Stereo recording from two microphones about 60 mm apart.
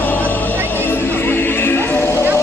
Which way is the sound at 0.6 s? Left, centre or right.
Left.